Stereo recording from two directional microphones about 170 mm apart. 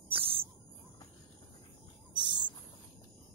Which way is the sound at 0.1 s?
30° right (ahead or behind).